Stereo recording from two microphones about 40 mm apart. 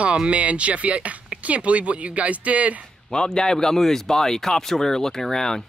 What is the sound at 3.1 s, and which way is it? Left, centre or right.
Speech, centre.